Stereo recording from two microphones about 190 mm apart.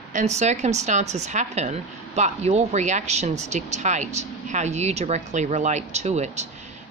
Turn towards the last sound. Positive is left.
turn(degrees=-35)  # may be behind; listen again after turning